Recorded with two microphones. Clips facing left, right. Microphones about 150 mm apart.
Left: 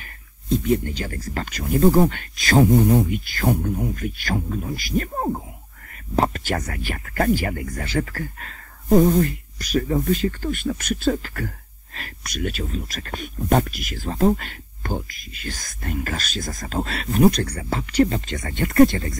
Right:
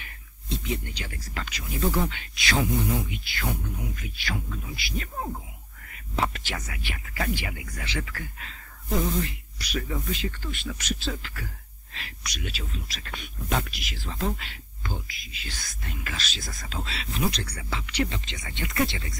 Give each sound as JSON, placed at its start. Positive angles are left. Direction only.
{"t": 0.0, "sound": "speech", "side_deg": 45}